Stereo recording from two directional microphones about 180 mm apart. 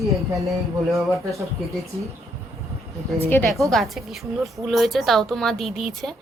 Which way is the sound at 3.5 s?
Centre (ahead or behind).